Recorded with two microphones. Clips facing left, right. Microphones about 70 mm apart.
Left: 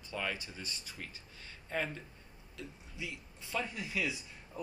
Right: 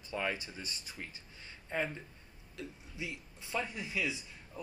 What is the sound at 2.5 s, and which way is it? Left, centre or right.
Speech, right.